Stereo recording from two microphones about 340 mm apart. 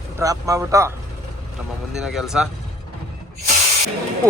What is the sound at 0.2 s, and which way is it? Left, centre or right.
Speech, centre.